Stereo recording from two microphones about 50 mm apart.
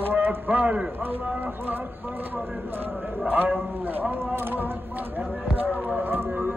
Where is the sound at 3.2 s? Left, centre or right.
Right.